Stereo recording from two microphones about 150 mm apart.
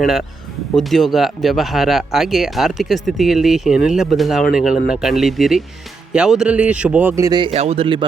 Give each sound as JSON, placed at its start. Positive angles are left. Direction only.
{"t": 0.0, "sound": "speech", "side_deg": 0}
{"t": 7.3, "sound": "speech", "side_deg": -30}
{"t": 7.5, "sound": "speech", "side_deg": -45}